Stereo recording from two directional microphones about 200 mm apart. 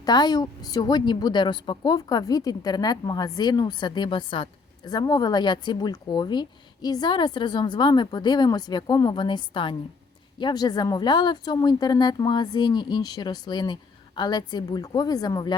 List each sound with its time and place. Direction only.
0.0 s speech: 20° left (ahead or behind)